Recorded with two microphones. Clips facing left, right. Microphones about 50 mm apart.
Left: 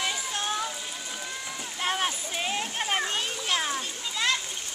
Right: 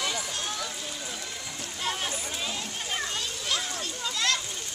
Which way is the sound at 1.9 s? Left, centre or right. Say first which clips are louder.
Left 3 dB; left.